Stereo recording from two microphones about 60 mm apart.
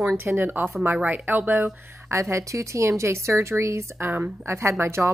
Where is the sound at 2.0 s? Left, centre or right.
Right.